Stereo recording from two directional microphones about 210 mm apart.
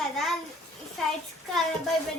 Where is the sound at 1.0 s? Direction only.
Centre (ahead or behind).